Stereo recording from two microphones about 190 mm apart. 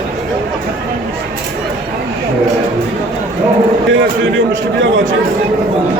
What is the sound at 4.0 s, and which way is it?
A man's voice, 70° right (ahead or behind).